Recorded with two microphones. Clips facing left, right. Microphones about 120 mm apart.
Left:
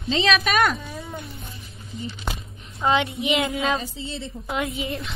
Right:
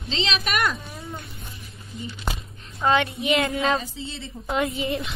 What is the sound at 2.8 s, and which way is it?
Speech, 20° left (ahead or behind).